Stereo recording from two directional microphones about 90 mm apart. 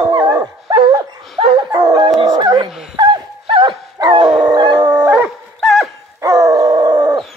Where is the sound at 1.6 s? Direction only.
45° right (ahead or behind).